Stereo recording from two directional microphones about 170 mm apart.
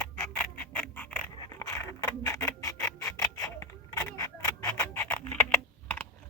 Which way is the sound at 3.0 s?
20° left (ahead or behind).